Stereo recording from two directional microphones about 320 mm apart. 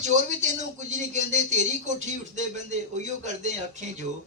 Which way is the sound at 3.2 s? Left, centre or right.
Right.